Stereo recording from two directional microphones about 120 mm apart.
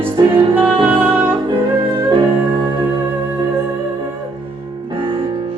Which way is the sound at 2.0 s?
40° right (ahead or behind).